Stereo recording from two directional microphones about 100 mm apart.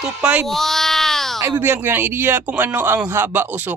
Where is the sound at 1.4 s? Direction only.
25° right (ahead or behind).